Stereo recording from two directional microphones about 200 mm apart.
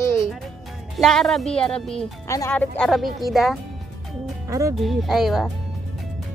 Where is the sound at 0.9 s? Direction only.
Centre (ahead or behind).